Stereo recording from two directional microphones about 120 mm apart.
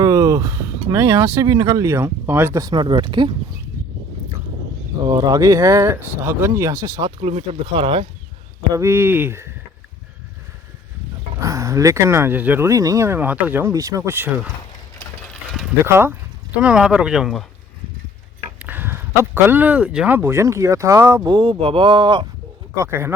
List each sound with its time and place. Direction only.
0.0 s speech: 25° right (ahead or behind)
2.6 s speech: 35° right (ahead or behind)
5.0 s speech: 35° right (ahead or behind)
7.2 s speech: 60° right (ahead or behind)
8.7 s speech: 20° right (ahead or behind)
11.3 s speech: 25° right (ahead or behind)
15.8 s speech: 20° right (ahead or behind)
16.6 s speech: 5° right (ahead or behind)
18.6 s speech: 15° right (ahead or behind)
21.2 s speech: 40° right (ahead or behind)
22.7 s speech: 25° right (ahead or behind)